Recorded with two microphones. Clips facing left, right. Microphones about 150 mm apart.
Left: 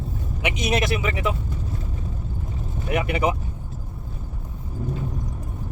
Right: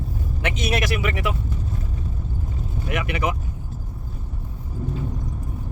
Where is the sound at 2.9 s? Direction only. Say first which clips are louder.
Left 3 dB; 30° left (ahead or behind).